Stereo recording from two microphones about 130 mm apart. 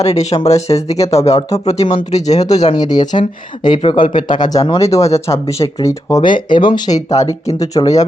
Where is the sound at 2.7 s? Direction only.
30° left (ahead or behind).